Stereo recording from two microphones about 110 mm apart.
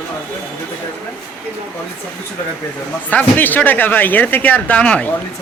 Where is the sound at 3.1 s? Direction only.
15° left (ahead or behind).